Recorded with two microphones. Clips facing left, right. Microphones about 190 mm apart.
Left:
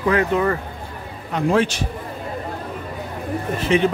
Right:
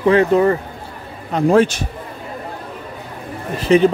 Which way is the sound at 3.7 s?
40° right (ahead or behind).